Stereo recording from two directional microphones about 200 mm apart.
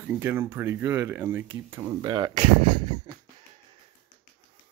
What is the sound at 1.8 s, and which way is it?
Speech, 25° right (ahead or behind).